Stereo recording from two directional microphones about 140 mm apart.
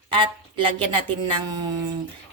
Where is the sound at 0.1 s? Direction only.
40° right (ahead or behind).